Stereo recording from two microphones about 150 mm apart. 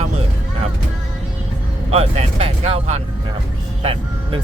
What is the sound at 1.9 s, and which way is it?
Speech, 45° right (ahead or behind).